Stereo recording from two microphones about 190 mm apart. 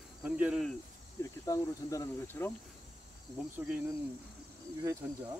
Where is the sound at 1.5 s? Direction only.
15° left (ahead or behind).